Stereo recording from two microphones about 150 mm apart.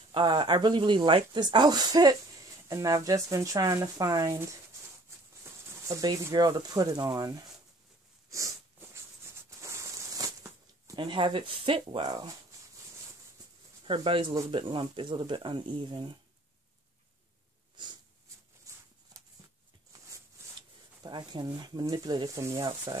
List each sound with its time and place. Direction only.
0.1 s speech: 30° right (ahead or behind)
8.3 s a sound: 20° right (ahead or behind)
11.0 s speech: 30° right (ahead or behind)
13.8 s speech: 35° right (ahead or behind)
17.8 s snort: 30° right (ahead or behind)
20.4 s a sound: 15° right (ahead or behind)
21.0 s speech: 30° right (ahead or behind)
22.6 s speech: 30° right (ahead or behind)